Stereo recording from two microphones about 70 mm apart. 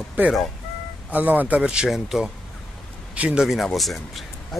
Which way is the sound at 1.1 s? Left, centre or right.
Right.